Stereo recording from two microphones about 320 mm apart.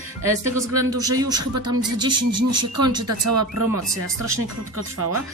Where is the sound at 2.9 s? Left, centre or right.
Right.